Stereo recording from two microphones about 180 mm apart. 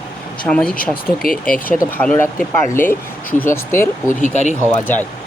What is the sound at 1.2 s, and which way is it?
Speech, 50° left (ahead or behind).